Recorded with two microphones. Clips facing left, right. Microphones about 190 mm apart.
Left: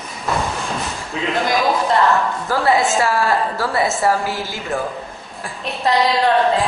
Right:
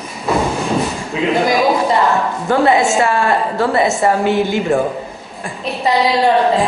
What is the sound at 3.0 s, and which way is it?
Speech, centre (ahead or behind).